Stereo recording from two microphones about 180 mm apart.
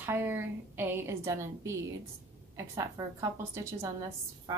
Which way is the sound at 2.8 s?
20° right (ahead or behind).